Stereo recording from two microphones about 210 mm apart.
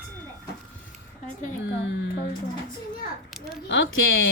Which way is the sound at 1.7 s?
60° left (ahead or behind).